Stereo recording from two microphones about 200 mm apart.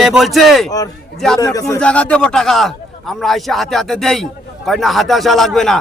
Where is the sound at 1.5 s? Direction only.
15° left (ahead or behind).